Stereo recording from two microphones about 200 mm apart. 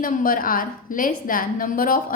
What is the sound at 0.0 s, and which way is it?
A woman's voice, 45° left (ahead or behind).